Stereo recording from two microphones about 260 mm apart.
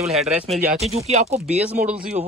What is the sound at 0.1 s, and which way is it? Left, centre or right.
Speech, centre.